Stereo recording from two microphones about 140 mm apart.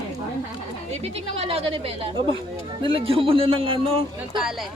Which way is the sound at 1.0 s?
45° right (ahead or behind).